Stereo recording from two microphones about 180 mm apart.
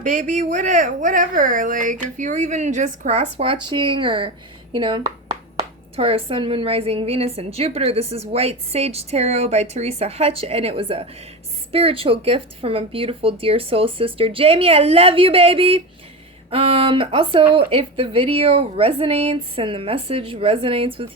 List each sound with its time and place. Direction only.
0.0 s a woman's voice: 45° right (ahead or behind)